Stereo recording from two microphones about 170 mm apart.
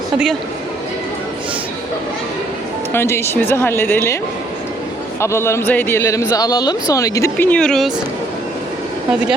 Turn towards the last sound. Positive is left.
turn(degrees=0)  # may be behind; listen again after turning